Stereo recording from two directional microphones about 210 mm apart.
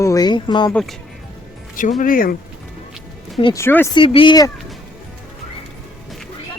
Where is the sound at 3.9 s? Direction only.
25° left (ahead or behind).